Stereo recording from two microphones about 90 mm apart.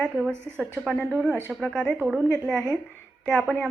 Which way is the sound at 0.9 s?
10° left (ahead or behind).